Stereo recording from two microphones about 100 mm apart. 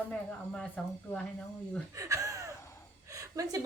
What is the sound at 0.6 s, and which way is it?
Speech, 10° left (ahead or behind).